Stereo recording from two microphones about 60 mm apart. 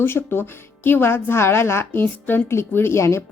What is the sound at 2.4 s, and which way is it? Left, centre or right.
Speech, left.